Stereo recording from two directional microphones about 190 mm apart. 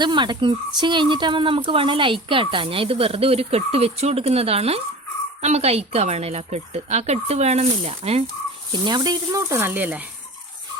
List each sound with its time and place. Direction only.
0.0 s a woman's voice: 25° right (ahead or behind)
8.7 s speech: 20° right (ahead or behind)